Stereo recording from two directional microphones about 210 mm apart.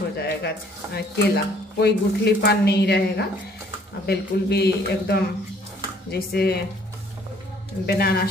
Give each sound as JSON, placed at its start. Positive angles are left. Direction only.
{"t": 0.2, "sound": "a sound", "side_deg": 50}
{"t": 0.9, "sound": "speech", "side_deg": 50}
{"t": 7.8, "sound": "speech", "side_deg": 50}